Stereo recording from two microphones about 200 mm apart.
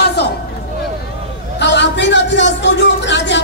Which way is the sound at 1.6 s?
60° left (ahead or behind).